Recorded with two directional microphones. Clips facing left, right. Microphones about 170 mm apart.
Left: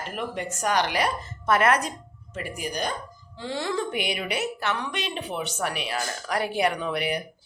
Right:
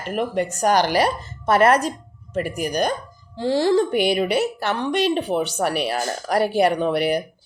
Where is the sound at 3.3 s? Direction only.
35° right (ahead or behind).